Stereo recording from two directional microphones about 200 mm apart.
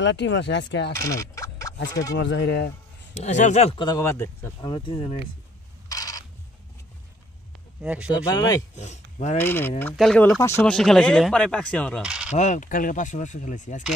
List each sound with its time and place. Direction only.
0.0 s speech: 65° left (ahead or behind)
0.9 s a sound: 15° left (ahead or behind)
1.9 s speech: 15° left (ahead or behind)
2.1 s speech: 60° left (ahead or behind)
3.2 s speech: 35° left (ahead or behind); by 4.6 s 15° left (ahead or behind)
4.6 s speech: 25° left (ahead or behind)
5.9 s a sound: 20° left (ahead or behind)
7.8 s speech: 5° right (ahead or behind)
8.1 s speech: 20° left (ahead or behind)
8.7 s speech: 35° left (ahead or behind)
9.4 s speech: 10° left (ahead or behind)
12.0 s coin: 5° right (ahead or behind)
12.3 s speech: 35° left (ahead or behind)